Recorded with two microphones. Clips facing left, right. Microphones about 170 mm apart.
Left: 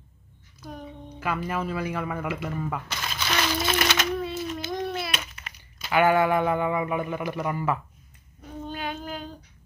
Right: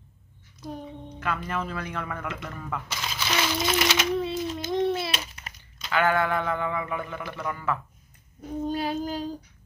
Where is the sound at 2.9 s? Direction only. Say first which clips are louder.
Right 3 dB; 5° right (ahead or behind).